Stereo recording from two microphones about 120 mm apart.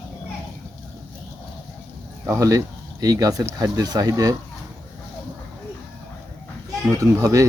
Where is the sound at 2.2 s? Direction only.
25° right (ahead or behind).